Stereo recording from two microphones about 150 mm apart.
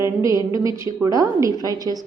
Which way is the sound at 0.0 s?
20° right (ahead or behind).